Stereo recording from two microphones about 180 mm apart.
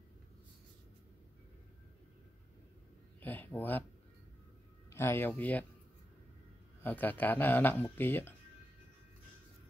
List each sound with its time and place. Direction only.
3.2 s speech: 10° left (ahead or behind)
4.8 s speech: 15° left (ahead or behind)
6.8 s speech: 10° left (ahead or behind)